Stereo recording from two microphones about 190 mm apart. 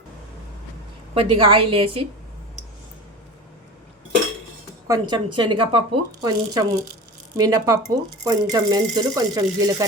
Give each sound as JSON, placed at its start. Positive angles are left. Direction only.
{"t": 1.1, "sound": "speech", "side_deg": -30}
{"t": 4.9, "sound": "speech", "side_deg": -25}